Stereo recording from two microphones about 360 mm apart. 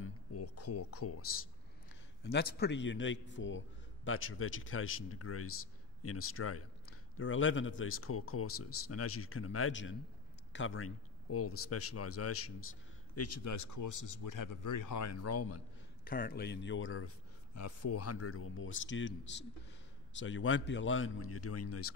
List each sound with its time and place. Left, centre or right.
0.0 s a sound: left
2.2 s a man's voice: left
16.0 s a man's voice: left
20.2 s a man's voice: left